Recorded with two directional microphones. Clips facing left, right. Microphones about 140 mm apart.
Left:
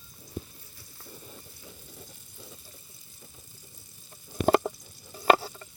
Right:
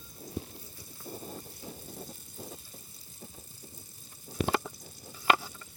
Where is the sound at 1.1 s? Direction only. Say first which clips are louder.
Right 7 dB; 45° right (ahead or behind).